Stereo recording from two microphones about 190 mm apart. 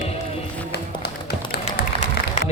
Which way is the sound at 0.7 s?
60° left (ahead or behind).